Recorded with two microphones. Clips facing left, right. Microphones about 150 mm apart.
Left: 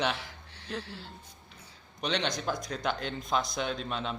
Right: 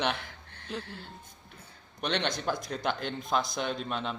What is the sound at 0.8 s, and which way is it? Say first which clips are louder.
Speech: even; 50° right (ahead or behind).